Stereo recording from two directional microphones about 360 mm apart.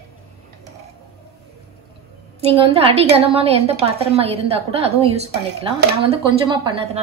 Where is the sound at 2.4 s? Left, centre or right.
Centre.